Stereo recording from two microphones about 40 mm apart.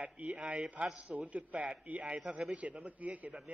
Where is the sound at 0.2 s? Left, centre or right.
Right.